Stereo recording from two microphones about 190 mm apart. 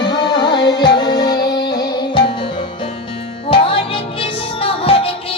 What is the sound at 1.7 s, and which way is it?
Music, 20° left (ahead or behind).